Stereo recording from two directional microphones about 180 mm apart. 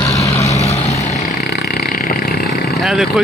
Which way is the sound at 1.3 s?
60° left (ahead or behind).